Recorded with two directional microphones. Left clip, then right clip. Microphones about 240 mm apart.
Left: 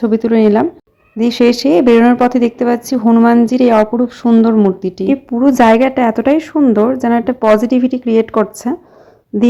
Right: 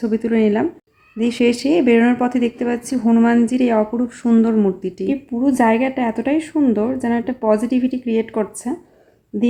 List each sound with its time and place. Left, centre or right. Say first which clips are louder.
0.0 s a woman's voice: left 6 dB; centre